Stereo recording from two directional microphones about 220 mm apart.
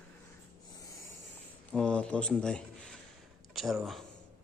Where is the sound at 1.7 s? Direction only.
5° left (ahead or behind).